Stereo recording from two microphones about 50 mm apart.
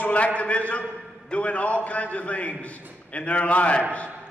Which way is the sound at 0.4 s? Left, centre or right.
Left.